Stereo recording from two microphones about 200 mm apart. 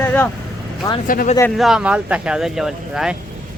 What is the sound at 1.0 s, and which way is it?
Speech, 45° left (ahead or behind).